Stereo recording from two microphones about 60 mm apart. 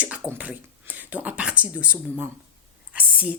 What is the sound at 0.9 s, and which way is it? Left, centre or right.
Speech, right.